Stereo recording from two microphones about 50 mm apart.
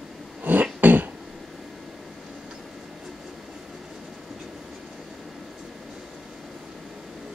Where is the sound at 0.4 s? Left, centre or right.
Right.